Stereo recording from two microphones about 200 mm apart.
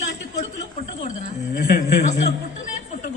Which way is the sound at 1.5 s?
50° left (ahead or behind).